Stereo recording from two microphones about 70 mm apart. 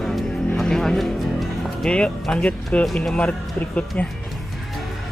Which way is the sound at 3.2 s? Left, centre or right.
Centre.